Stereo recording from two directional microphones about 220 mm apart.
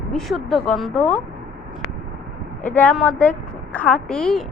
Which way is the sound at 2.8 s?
5° left (ahead or behind).